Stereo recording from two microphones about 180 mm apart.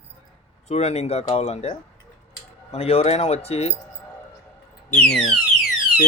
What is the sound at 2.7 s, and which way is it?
Speech, 35° left (ahead or behind).